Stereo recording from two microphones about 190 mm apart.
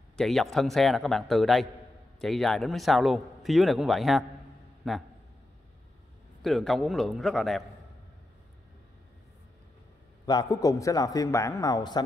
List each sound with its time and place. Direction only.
0.2 s a man's voice: centre (ahead or behind)
6.4 s a man's voice: centre (ahead or behind)
10.2 s a man's voice: 20° left (ahead or behind)